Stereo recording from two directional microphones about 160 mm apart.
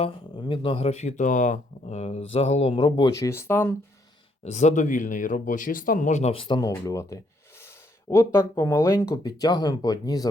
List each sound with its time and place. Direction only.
0.0 s speech: 30° left (ahead or behind)
3.0 s speech: 20° left (ahead or behind)
4.4 s speech: 45° left (ahead or behind)
6.3 s speech: 30° left (ahead or behind)